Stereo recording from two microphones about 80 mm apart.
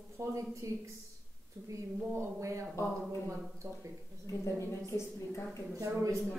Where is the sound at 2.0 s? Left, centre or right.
Right.